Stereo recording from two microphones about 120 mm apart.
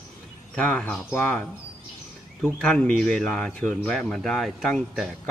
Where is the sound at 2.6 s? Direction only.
5° left (ahead or behind).